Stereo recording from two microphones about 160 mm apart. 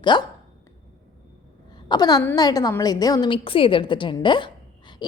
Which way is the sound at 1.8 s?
25° left (ahead or behind).